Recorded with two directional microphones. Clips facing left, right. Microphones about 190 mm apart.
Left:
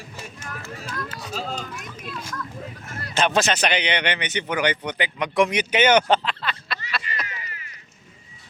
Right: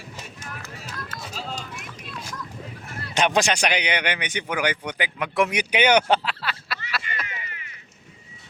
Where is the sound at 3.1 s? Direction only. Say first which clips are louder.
Even; 15° right (ahead or behind).